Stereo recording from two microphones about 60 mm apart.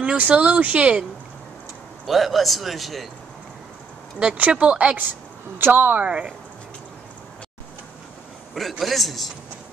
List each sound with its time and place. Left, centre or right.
0.0 s speech: right
2.0 s a man's voice: centre
4.2 s speech: centre
5.6 s speech: right
6.0 s speech: centre
8.5 s a man's voice: centre